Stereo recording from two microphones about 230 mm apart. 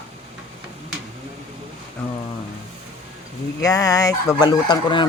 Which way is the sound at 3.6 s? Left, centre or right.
Centre.